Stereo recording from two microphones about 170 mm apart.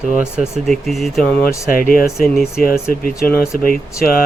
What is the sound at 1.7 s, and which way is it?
Speech, 55° left (ahead or behind).